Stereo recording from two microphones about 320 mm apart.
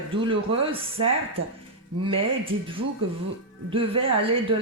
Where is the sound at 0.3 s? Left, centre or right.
Centre.